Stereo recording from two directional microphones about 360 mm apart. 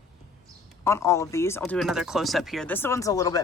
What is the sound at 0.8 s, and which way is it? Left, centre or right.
Speech, centre.